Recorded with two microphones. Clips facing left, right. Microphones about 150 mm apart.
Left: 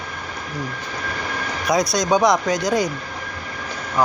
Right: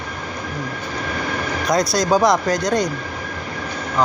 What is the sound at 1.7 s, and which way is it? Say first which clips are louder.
Speech: right 1 dB; centre (ahead or behind).